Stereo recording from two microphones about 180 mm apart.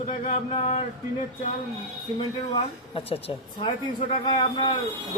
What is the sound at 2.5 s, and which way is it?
Speech, 30° left (ahead or behind).